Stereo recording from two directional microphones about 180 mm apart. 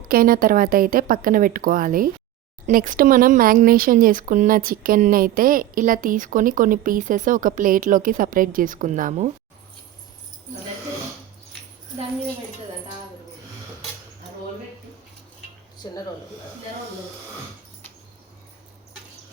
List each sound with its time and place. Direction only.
0.1 s speech: 50° right (ahead or behind)
15.8 s speech: 20° left (ahead or behind)